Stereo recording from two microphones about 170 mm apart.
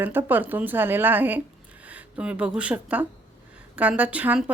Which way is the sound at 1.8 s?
10° right (ahead or behind).